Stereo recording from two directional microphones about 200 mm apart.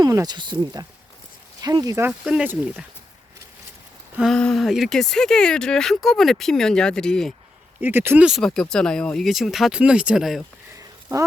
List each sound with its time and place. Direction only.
0.0 s speech: 20° right (ahead or behind)
4.2 s speech: 5° left (ahead or behind)
7.8 s speech: 10° right (ahead or behind)
10.8 s a sound: 15° right (ahead or behind)